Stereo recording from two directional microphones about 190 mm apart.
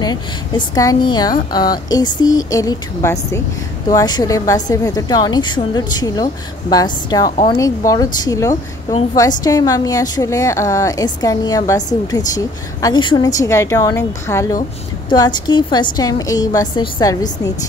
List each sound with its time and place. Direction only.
0.0 s a woman's voice: 20° left (ahead or behind)